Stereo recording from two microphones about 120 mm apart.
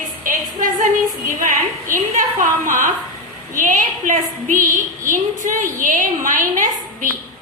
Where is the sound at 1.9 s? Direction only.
90° right.